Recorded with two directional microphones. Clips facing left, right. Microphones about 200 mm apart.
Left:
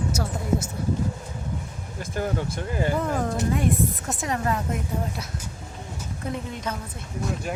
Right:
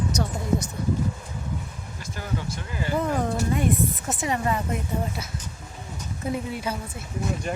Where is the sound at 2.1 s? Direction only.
50° left (ahead or behind).